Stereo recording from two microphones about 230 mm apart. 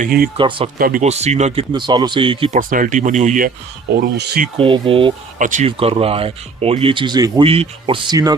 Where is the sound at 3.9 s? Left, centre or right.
Right.